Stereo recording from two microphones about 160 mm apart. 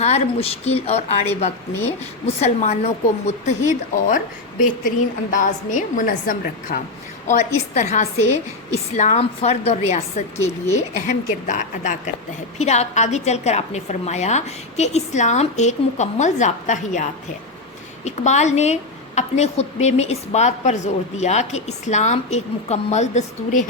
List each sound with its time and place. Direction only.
0.0 s speech: 40° left (ahead or behind)
2.2 s speech: 40° left (ahead or behind)
5.3 s speech: 50° left (ahead or behind)
10.3 s a woman's voice: 15° left (ahead or behind)
10.8 s speech: 55° left (ahead or behind)